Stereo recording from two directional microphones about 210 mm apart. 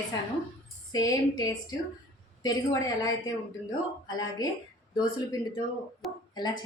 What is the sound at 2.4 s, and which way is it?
A woman's voice, 15° left (ahead or behind).